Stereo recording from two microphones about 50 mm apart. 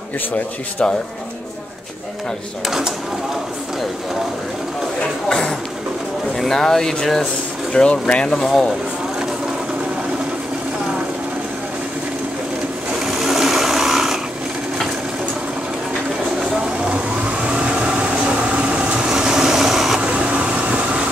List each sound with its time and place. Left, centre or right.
5.3 s speech: centre
7.7 s speech: left
8.3 s speech: centre
13.0 s sewing machine: centre
16.3 s vehicle: right
20.0 s a sound: right